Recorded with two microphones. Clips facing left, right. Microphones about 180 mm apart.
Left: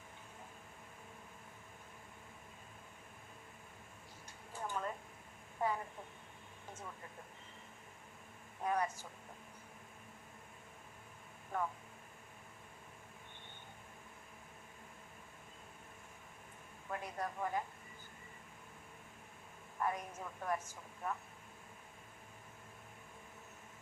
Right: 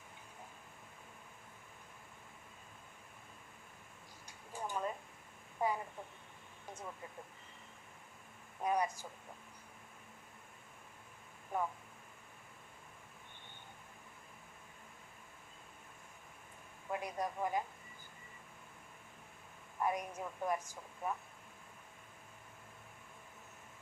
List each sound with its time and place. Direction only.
4.5 s a sound: 15° right (ahead or behind)
8.6 s a woman's voice: 15° right (ahead or behind)
11.5 s a woman's voice: 15° right (ahead or behind)
16.9 s a woman's voice: 15° right (ahead or behind)
19.8 s a woman's voice: 15° right (ahead or behind)